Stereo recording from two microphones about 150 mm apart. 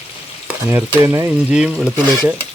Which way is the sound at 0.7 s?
15° right (ahead or behind).